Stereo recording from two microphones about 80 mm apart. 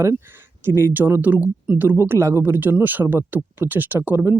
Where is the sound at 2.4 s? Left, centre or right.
Right.